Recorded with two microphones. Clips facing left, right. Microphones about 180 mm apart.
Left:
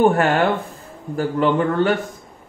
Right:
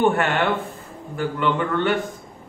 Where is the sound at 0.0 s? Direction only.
40° left (ahead or behind).